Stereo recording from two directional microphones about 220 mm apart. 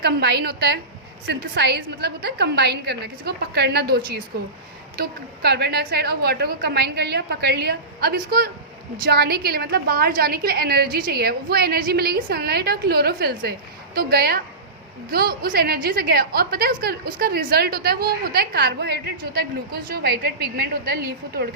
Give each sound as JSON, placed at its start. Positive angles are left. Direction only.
{"t": 0.0, "sound": "a woman's voice", "side_deg": -45}